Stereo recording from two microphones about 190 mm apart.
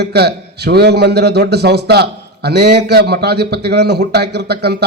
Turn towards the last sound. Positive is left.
turn(degrees=-60)  # may be behind; listen again after turning